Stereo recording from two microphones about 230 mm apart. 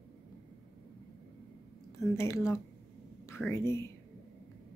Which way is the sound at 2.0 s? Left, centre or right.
Centre.